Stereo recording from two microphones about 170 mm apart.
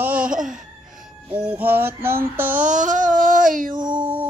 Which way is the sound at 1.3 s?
10° right (ahead or behind).